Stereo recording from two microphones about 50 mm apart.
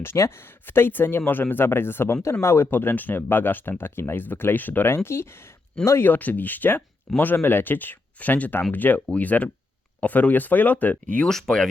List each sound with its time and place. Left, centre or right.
0.0 s speech: left
2.4 s speech: left
2.6 s speech: left
4.9 s speech: left
6.0 s speech: left
11.3 s speech: centre